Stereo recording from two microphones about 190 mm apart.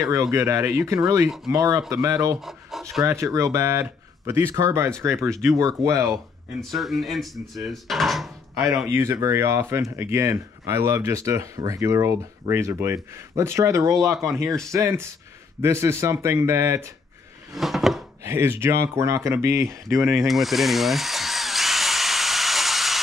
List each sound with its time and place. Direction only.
0.0 s speech: 15° right (ahead or behind)
2.4 s speech: centre (ahead or behind)
3.1 s speech: 15° right (ahead or behind)
6.1 s speech: centre (ahead or behind)
8.5 s speech: 15° right (ahead or behind)
17.6 s a sound: centre (ahead or behind)
18.2 s speech: 15° right (ahead or behind)
20.2 s drill: centre (ahead or behind)